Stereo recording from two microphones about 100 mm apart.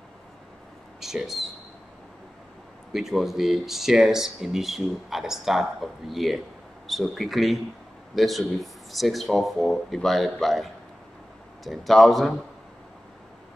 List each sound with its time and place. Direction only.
1.0 s speech: 5° right (ahead or behind)
2.9 s speech: 5° right (ahead or behind)